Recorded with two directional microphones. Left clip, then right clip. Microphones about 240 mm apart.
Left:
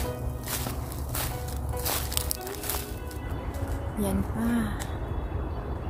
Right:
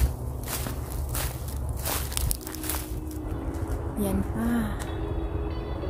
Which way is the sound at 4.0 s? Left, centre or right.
Centre.